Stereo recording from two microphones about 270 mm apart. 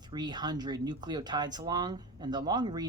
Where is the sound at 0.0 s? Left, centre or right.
Centre.